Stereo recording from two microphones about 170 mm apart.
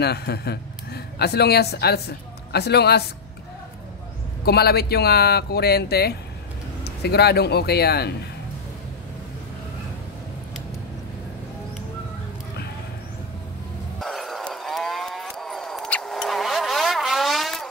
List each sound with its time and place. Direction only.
0.0 s a man's voice: 70° left (ahead or behind)
4.5 s a man's voice: 70° left (ahead or behind)
13.9 s a sound: centre (ahead or behind)